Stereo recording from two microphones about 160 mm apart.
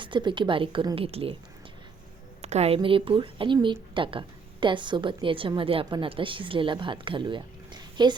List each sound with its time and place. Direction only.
0.0 s a woman's voice: 30° right (ahead or behind)
2.4 s a woman's voice: 40° right (ahead or behind); by 8.1 s 25° right (ahead or behind)